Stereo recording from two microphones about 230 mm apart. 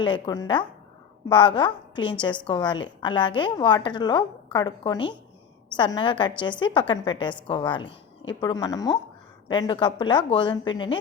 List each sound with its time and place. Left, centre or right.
0.0 s a woman's voice: centre
7.9 s a sound: left
8.4 s a woman's voice: centre